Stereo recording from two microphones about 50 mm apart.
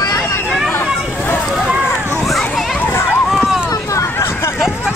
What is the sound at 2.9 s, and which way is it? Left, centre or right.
Run, left.